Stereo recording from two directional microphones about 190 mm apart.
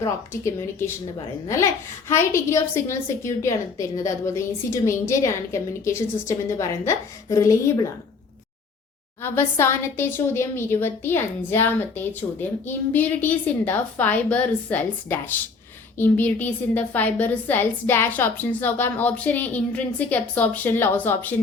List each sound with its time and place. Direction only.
0.0 s a woman's voice: 15° left (ahead or behind)
9.2 s a woman's voice: 10° left (ahead or behind)